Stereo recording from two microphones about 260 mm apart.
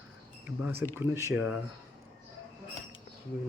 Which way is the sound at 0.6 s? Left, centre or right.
Centre.